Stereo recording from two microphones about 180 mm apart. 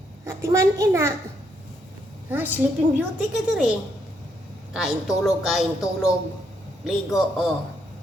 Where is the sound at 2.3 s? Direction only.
10° right (ahead or behind).